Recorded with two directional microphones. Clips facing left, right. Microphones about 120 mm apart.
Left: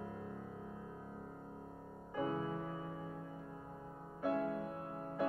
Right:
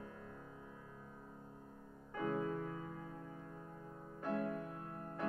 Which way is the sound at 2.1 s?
10° left (ahead or behind).